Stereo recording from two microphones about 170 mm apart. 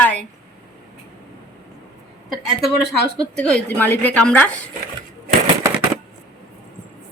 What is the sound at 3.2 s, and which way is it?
A woman's voice, 5° left (ahead or behind).